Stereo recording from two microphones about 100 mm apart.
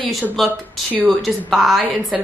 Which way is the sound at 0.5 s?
20° right (ahead or behind).